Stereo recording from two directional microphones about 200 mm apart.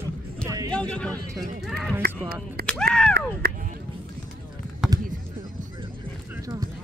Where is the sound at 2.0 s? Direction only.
50° right (ahead or behind).